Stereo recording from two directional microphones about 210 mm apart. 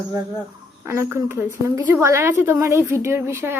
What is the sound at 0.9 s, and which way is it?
A woman's voice, 10° right (ahead or behind).